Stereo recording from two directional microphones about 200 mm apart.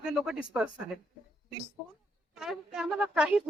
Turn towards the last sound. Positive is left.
turn(degrees=-5)  # may be behind; listen again after turning